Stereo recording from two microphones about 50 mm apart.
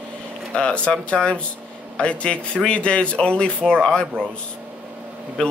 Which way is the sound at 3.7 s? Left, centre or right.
Centre.